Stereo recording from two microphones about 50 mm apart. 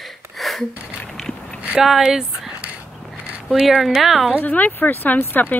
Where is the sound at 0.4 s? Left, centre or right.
Centre.